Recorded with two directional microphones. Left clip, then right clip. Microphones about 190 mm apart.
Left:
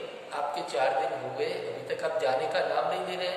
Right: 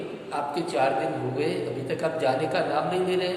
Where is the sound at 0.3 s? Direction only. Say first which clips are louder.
Right 4 dB; 10° right (ahead or behind).